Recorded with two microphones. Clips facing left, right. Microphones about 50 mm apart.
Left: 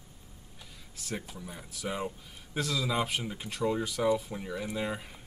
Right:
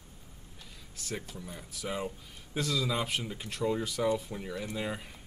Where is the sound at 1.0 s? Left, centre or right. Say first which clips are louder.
Left 1 dB; centre.